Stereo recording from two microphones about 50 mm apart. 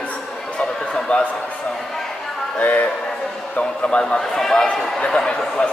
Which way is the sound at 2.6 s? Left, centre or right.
Left.